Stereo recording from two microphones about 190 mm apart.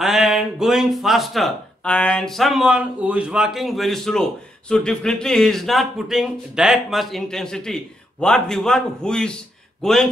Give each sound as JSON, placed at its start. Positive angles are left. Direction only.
{"t": 0.0, "sound": "speech", "side_deg": 0}